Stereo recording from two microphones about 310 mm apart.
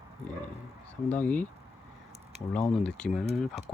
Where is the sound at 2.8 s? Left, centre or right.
Centre.